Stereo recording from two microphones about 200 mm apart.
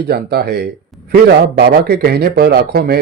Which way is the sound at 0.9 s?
Centre (ahead or behind).